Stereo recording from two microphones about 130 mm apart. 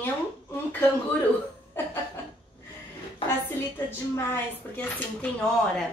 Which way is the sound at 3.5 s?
15° left (ahead or behind).